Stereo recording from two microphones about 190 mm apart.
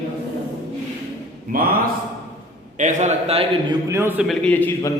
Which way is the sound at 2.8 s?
40° right (ahead or behind).